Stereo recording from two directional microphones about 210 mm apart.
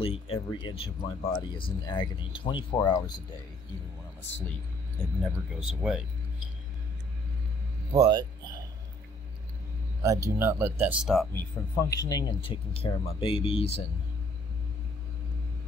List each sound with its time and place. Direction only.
0.0 s speech: 25° left (ahead or behind)
5.2 s speech: 5° right (ahead or behind)
7.9 s speech: 20° right (ahead or behind)
10.0 s speech: 15° right (ahead or behind)
11.7 s speech: 15° left (ahead or behind)